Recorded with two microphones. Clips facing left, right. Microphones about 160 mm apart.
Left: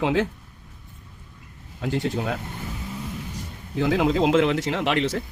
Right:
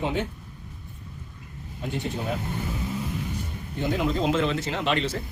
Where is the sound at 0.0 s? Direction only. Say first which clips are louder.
Left 5 dB; 90° left.